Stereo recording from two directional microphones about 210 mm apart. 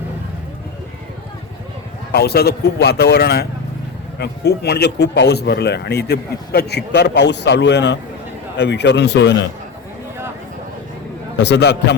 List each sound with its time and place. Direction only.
2.1 s a man's voice: 50° left (ahead or behind)
11.3 s a man's voice: 55° left (ahead or behind)